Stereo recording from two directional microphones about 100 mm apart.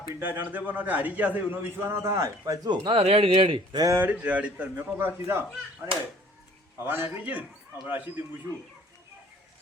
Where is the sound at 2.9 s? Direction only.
85° right; by 3.8 s 60° right (ahead or behind).